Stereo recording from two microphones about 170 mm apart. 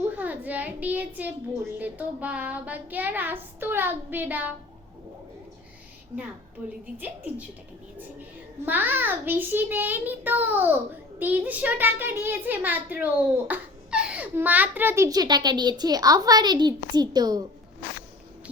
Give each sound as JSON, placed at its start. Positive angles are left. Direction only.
{"t": 0.2, "sound": "a child's voice", "side_deg": -10}
{"t": 1.8, "sound": "child singing", "side_deg": -10}
{"t": 6.6, "sound": "child singing", "side_deg": -10}
{"t": 8.6, "sound": "child singing", "side_deg": -10}
{"t": 13.5, "sound": "a child's voice", "side_deg": -5}